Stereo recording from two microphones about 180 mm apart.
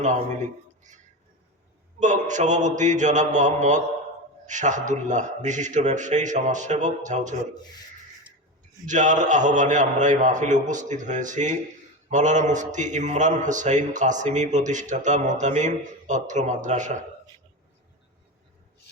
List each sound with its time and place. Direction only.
2.0 s a man's voice: 45° right (ahead or behind)
8.9 s a man's voice: 45° right (ahead or behind)